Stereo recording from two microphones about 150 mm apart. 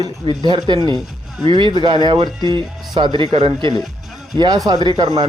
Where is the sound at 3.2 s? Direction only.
40° right (ahead or behind).